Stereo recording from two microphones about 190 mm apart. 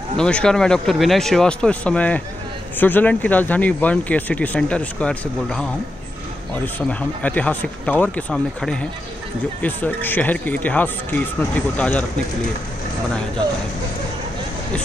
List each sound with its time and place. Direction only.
0.2 s speech: 5° left (ahead or behind)